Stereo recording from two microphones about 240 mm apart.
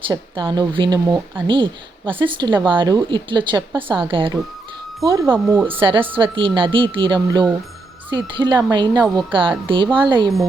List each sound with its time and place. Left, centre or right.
0.1 s speech: centre
5.6 s speech: right